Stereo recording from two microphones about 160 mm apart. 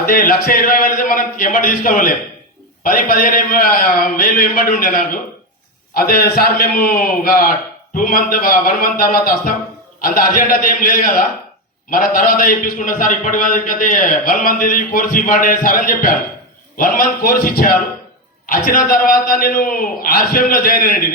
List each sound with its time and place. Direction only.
0.0 s a man's voice: 65° left (ahead or behind)